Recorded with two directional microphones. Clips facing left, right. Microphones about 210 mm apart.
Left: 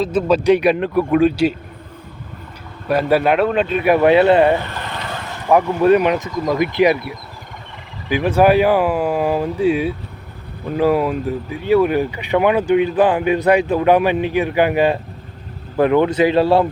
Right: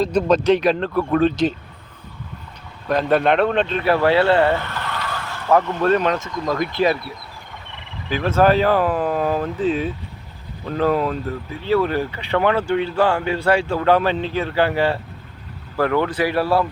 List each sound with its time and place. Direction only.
0.0 s speech: 5° left (ahead or behind)
2.8 s speech: 10° left (ahead or behind)
8.1 s a man's voice: 15° left (ahead or behind)